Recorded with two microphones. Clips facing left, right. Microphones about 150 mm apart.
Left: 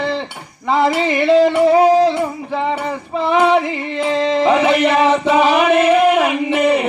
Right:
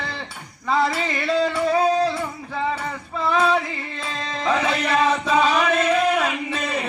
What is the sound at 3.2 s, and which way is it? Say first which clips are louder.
Female singing: left 6 dB; 25° left (ahead or behind).